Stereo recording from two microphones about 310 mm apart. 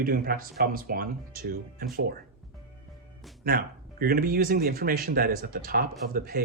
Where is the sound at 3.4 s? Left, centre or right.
Right.